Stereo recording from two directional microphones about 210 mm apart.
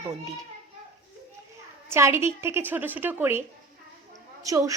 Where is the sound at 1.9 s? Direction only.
10° right (ahead or behind).